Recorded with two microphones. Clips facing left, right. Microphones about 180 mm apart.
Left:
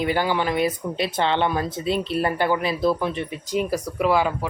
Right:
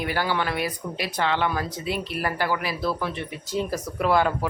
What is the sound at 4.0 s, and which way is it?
Speech, 5° left (ahead or behind).